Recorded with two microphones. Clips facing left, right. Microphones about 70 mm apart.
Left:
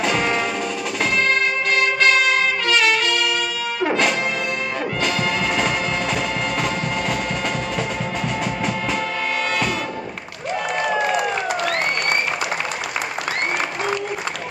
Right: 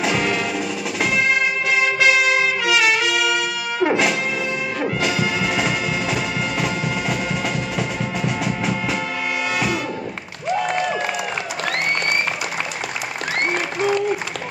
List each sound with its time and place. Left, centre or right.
0.0 s music: centre
1.8 s trumpet: centre
3.8 s music: centre
7.7 s music: centre